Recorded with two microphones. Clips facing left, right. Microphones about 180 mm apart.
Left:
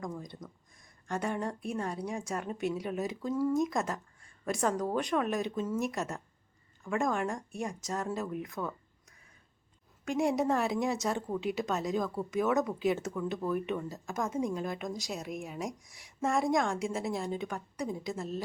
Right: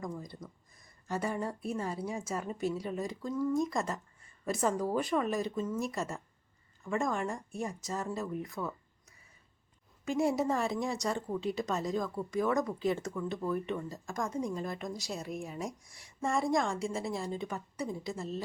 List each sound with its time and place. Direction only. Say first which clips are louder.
0.0 s speech: left 1 dB; centre (ahead or behind)